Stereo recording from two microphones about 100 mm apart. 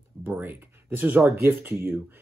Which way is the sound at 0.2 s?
20° right (ahead or behind).